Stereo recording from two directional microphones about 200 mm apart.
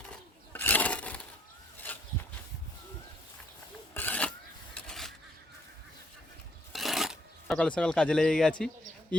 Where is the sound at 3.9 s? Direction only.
10° left (ahead or behind).